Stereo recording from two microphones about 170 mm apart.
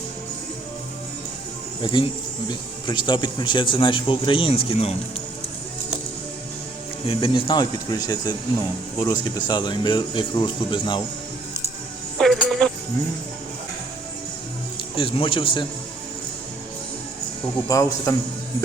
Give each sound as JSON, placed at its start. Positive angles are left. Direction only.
{"t": 1.8, "sound": "speech", "side_deg": 30}
{"t": 7.1, "sound": "speech", "side_deg": 30}
{"t": 12.1, "sound": "music", "side_deg": 0}
{"t": 14.9, "sound": "speech", "side_deg": 30}
{"t": 17.7, "sound": "speech", "side_deg": 20}